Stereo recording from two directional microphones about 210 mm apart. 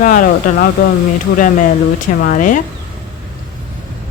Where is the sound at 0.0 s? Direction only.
40° left (ahead or behind).